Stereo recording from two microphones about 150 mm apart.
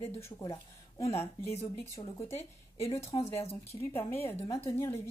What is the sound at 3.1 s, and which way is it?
Speech, 30° left (ahead or behind).